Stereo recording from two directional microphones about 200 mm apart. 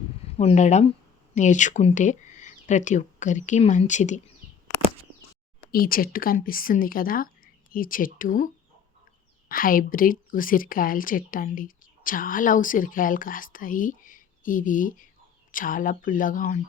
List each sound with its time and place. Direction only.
0.3 s speech: 30° left (ahead or behind)
5.7 s a woman's voice: 45° left (ahead or behind)
9.5 s a woman's voice: 45° left (ahead or behind)